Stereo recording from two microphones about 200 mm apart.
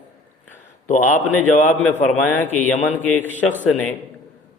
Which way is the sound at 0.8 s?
35° left (ahead or behind).